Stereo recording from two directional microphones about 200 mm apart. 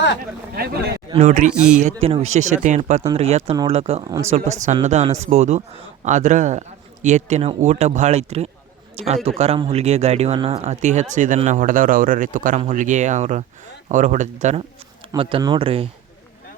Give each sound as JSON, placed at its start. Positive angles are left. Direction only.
{"t": 0.5, "sound": "speech", "side_deg": -50}
{"t": 15.1, "sound": "speech", "side_deg": -25}